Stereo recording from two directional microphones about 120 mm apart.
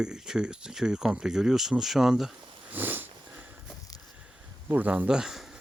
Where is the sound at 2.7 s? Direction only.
15° right (ahead or behind).